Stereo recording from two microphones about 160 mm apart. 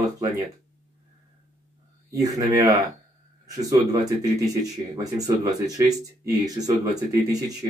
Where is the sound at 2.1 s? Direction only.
20° right (ahead or behind).